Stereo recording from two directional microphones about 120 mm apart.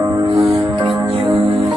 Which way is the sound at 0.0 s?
35° right (ahead or behind).